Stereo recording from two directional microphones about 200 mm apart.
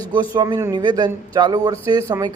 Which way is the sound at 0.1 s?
20° right (ahead or behind).